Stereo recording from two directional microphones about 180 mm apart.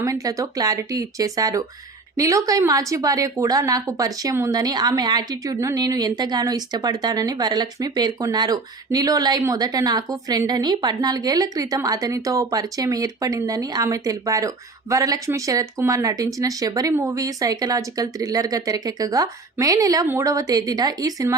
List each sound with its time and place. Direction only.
0.0 s a woman's voice: 20° right (ahead or behind)